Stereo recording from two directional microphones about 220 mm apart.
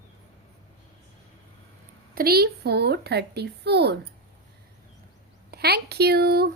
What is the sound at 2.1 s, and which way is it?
Speech, 45° right (ahead or behind).